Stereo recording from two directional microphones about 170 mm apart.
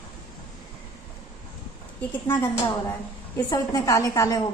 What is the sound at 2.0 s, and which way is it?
A woman's voice, 15° left (ahead or behind).